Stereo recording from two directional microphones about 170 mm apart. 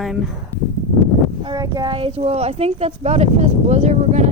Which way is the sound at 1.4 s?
25° right (ahead or behind).